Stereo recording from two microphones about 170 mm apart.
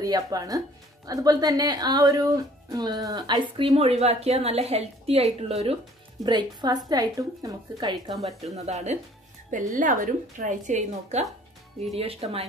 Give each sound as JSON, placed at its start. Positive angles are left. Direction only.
{"t": 0.0, "sound": "a woman's voice", "side_deg": -20}
{"t": 6.2, "sound": "a woman's voice", "side_deg": -25}
{"t": 8.5, "sound": "a woman's voice", "side_deg": -40}